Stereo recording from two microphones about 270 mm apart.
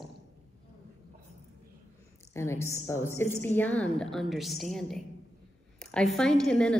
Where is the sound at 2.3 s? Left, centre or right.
Centre.